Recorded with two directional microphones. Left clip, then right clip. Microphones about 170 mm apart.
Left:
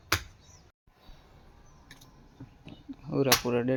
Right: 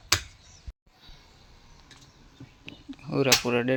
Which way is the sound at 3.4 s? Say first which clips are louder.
Right 3 dB; 5° right (ahead or behind).